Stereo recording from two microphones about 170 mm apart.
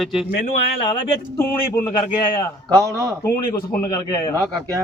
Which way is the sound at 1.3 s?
15° left (ahead or behind).